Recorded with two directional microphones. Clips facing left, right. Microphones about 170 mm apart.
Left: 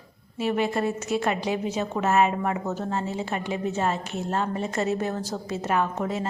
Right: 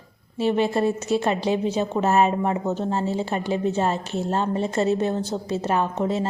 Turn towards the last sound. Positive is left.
turn(degrees=-30)  # may be behind; listen again after turning